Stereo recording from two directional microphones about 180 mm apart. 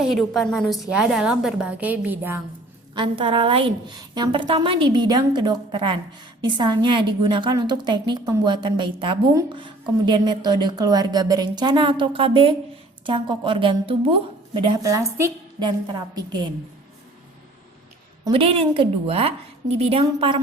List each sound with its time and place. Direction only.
0.0 s a woman's voice: centre (ahead or behind)
2.9 s a woman's voice: 30° right (ahead or behind)
14.8 s a woman's voice: 20° right (ahead or behind)
18.3 s a woman's voice: 30° right (ahead or behind)